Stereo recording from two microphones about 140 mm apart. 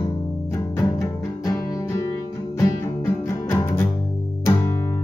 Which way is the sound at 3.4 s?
15° left (ahead or behind).